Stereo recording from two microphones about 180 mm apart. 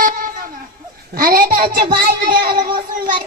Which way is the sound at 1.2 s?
55° right (ahead or behind).